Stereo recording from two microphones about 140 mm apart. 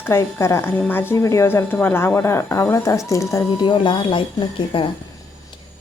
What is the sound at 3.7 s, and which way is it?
Speech, 35° left (ahead or behind).